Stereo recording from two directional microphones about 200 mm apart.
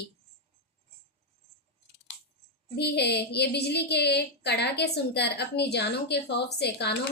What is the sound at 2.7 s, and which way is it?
A woman's voice, 55° left (ahead or behind).